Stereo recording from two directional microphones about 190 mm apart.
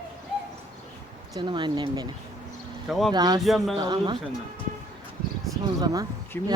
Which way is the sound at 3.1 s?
20° right (ahead or behind).